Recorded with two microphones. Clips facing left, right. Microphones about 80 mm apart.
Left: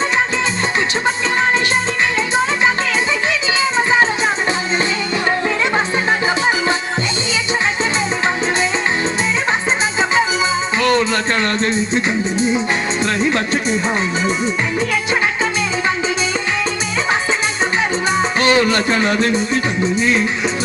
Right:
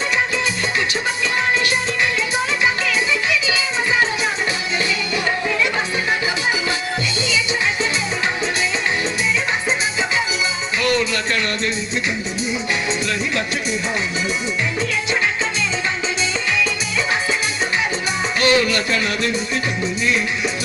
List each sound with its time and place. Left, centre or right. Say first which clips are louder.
10.8 s music: left 3 dB; left
13.1 s music: left 5 dB; left
18.3 s a man's voice: left 1 dB; left
19.8 s music: left 5 dB; left